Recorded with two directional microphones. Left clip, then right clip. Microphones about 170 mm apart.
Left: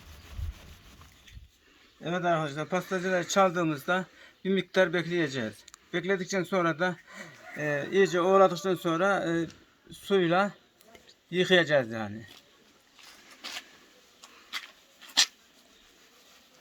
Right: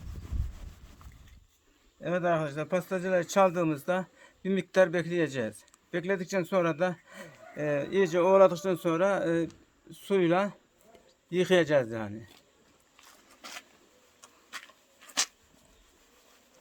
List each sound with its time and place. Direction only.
2.0 s a man's voice: 35° right (ahead or behind)